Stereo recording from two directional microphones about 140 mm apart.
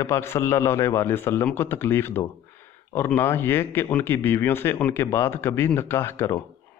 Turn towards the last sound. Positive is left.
turn(degrees=15)  # may be behind; listen again after turning